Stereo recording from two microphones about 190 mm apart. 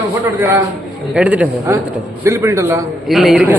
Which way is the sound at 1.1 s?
5° right (ahead or behind).